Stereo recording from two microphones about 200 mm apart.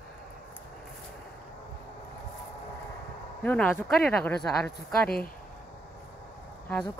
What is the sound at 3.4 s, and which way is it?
Speech, 10° left (ahead or behind).